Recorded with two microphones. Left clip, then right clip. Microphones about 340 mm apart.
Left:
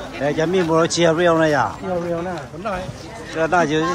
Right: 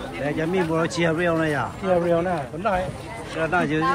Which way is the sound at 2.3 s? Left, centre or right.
Right.